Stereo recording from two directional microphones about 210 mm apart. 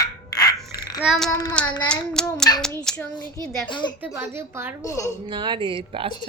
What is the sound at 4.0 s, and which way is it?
Speech, 10° right (ahead or behind).